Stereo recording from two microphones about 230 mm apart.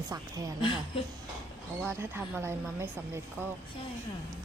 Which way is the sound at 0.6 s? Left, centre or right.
Left.